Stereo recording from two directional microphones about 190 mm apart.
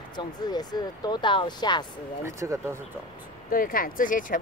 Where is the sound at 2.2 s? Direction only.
15° right (ahead or behind).